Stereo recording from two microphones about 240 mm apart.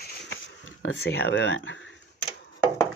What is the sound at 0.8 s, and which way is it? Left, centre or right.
Speech, left.